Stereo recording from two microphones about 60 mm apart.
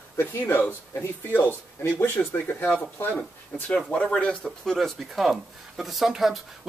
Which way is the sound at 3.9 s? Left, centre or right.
Centre.